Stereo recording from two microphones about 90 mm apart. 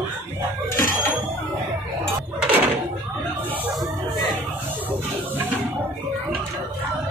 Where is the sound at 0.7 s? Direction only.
25° left (ahead or behind).